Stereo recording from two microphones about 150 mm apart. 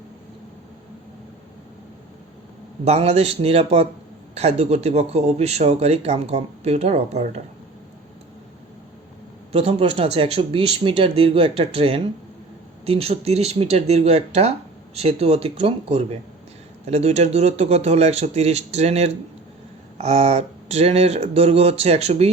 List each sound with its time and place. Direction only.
2.8 s speech: 45° right (ahead or behind)
9.5 s speech: 40° right (ahead or behind)